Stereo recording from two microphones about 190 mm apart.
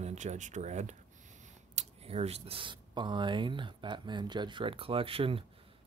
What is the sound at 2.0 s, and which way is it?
Speech, 30° right (ahead or behind).